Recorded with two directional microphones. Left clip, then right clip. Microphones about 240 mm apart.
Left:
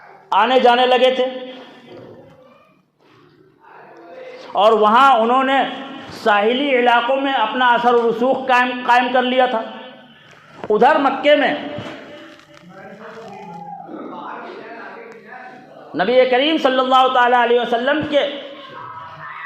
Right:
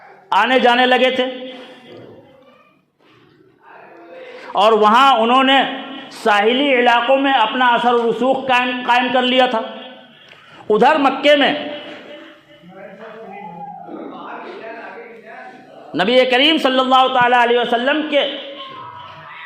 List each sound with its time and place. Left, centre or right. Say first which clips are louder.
0.3 s a man's voice: even; right
4.4 s a man's voice: right 1 dB; right
6.1 s a man's voice: right 1 dB; right
10.7 s a man's voice: right 1 dB; right
11.5 s a sound: right 1 dB; centre
15.9 s a man's voice: even; right
18.3 s a sound: right 2 dB; centre